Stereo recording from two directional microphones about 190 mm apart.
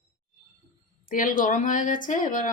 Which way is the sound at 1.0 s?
45° left (ahead or behind).